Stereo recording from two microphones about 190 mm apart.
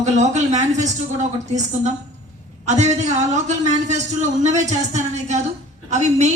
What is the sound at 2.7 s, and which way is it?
A woman's voice, 35° right (ahead or behind).